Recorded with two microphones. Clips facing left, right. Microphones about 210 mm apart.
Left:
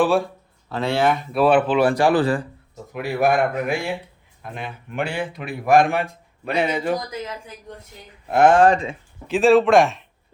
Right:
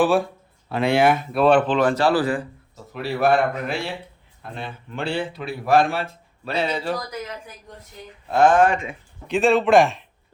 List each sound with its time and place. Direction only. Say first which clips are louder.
0.0 s a man's voice: even; centre (ahead or behind)
0.7 s speech: right 2 dB; 15° right (ahead or behind)
1.3 s speech: even; 5° left (ahead or behind)
8.3 s speech: left 1 dB; 20° left (ahead or behind)
8.6 s speech: left 4 dB; 35° left (ahead or behind)
9.2 s a man's voice: left 3 dB; centre (ahead or behind)